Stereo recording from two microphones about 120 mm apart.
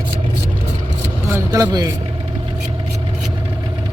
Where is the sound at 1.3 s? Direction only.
25° right (ahead or behind).